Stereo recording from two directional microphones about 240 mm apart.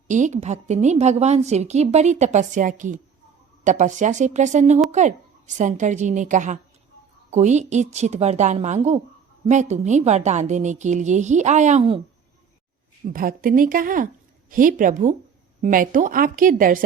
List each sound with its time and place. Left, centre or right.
0.1 s a woman's voice: right
13.1 s a woman's voice: right